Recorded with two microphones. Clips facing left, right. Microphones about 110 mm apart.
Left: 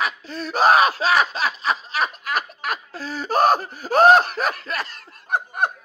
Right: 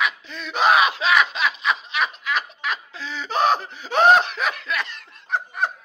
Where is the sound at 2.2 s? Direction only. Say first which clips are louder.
Even; 45° left (ahead or behind).